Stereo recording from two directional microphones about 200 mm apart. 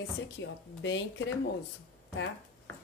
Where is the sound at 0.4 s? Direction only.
65° left (ahead or behind).